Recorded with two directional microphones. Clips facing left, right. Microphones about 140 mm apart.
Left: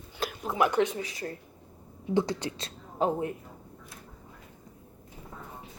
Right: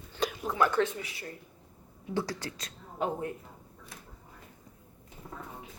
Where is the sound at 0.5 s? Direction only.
15° left (ahead or behind).